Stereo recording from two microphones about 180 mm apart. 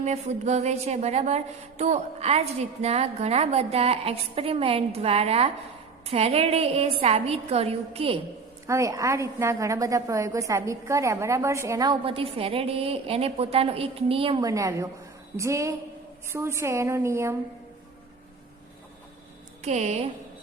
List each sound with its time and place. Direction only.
0.0 s a woman's voice: 40° right (ahead or behind)
8.6 s a woman's voice: 15° right (ahead or behind)
14.4 s a woman's voice: 20° right (ahead or behind)
19.6 s a woman's voice: 40° right (ahead or behind)